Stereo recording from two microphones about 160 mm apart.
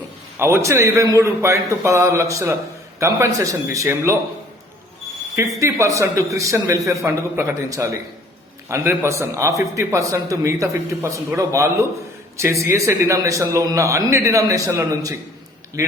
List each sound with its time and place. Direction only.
0.3 s a man's voice: 15° right (ahead or behind)
5.4 s a man's voice: 20° right (ahead or behind)